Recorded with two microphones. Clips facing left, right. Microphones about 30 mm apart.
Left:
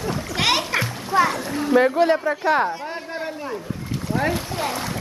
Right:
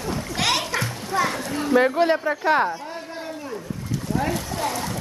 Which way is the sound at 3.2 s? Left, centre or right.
Left.